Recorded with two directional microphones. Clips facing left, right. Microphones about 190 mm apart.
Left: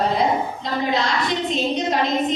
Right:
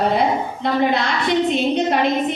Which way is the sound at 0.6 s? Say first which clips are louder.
Right 7 dB; 60° right (ahead or behind).